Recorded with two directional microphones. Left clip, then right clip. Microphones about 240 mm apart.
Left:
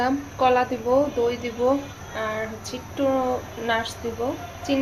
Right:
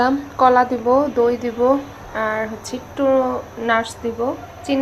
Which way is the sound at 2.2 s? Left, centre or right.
Centre.